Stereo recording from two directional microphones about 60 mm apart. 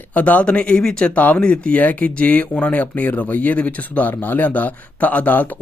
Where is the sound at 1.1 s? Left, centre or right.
Left.